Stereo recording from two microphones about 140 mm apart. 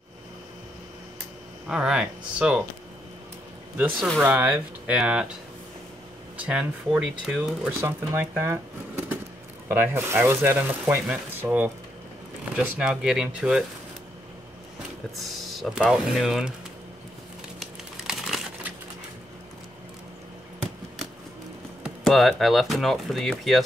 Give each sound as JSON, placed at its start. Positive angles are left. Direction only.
{"t": 1.7, "sound": "speech", "side_deg": -5}
{"t": 3.7, "sound": "speech", "side_deg": -10}
{"t": 6.4, "sound": "speech", "side_deg": -10}
{"t": 7.8, "sound": "speech", "side_deg": -15}
{"t": 15.1, "sound": "speech", "side_deg": 0}
{"t": 17.6, "sound": "crumpling", "side_deg": 0}
{"t": 22.0, "sound": "speech", "side_deg": 0}